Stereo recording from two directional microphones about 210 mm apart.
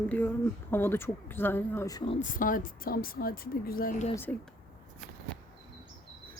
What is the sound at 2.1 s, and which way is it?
A woman's voice, 40° left (ahead or behind).